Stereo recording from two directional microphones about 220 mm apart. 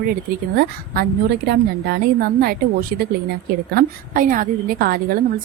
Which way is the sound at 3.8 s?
40° right (ahead or behind).